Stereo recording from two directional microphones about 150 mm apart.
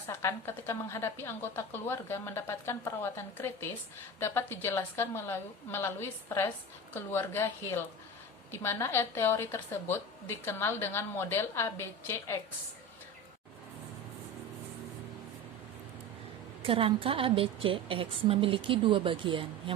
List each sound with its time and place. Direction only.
0.1 s a woman's voice: 15° left (ahead or behind)
16.6 s a woman's voice: 35° right (ahead or behind)